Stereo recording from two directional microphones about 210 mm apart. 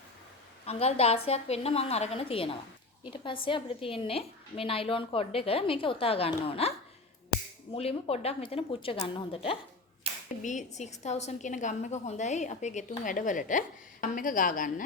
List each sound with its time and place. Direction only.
0.6 s a woman's voice: 30° left (ahead or behind)